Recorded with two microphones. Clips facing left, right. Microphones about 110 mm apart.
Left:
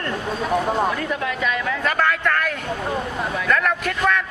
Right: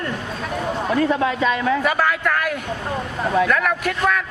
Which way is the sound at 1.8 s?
5° right (ahead or behind).